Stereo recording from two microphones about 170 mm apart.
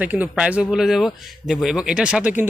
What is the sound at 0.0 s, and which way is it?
Speech, 10° right (ahead or behind).